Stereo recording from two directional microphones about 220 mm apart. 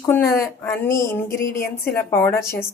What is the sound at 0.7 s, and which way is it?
A woman's voice, 10° left (ahead or behind).